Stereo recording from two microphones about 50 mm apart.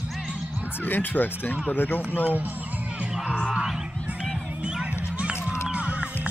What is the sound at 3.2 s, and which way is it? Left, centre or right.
Music, centre.